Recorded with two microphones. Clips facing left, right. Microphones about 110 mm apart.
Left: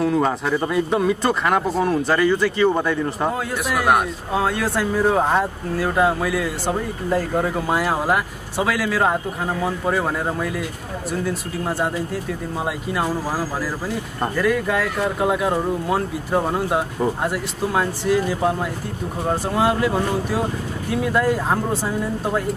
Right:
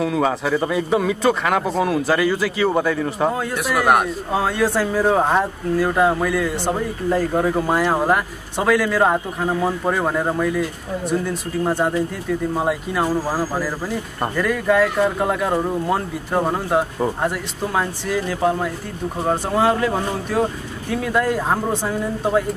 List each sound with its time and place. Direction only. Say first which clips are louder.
0.0 s speech: even; centre (ahead or behind)
11.6 s speech: right 4 dB; centre (ahead or behind)